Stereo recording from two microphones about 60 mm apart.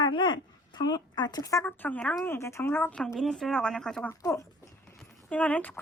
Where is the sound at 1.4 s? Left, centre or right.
Left.